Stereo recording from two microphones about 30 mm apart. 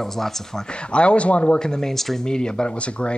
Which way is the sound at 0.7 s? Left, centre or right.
Left.